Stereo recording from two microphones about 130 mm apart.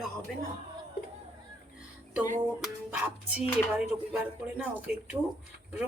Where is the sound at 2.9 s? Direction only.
15° right (ahead or behind).